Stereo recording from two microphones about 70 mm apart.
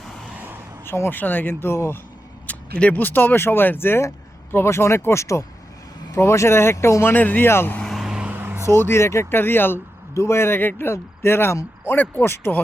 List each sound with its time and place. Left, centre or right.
0.9 s speech: left
2.5 s speech: centre; by 7.1 s left
7.1 s speech: left
7.9 s vehicle: centre
8.2 s vehicle: right
8.6 s speech: left